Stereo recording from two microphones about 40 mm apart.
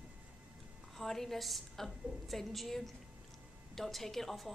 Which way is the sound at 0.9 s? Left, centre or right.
Centre.